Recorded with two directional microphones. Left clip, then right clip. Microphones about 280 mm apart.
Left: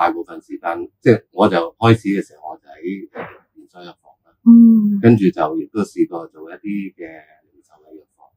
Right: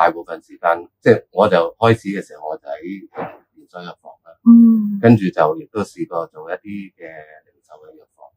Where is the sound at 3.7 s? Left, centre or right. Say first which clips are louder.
Right 6 dB; centre.